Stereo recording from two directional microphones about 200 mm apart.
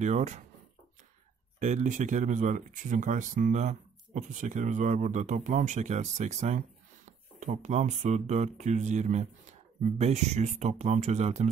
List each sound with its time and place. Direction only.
0.0 s speech: 35° right (ahead or behind)
1.6 s speech: 40° right (ahead or behind)